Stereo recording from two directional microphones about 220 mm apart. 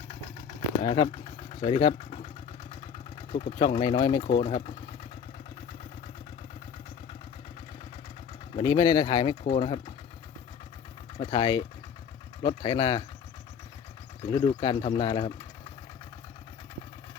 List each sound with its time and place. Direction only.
0.8 s speech: 25° left (ahead or behind)
8.5 s speech: 20° left (ahead or behind)
11.2 s speech: 20° left (ahead or behind)
14.2 s speech: 20° left (ahead or behind)